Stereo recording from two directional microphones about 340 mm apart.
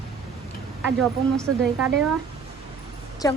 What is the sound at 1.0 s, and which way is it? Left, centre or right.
Speech, centre.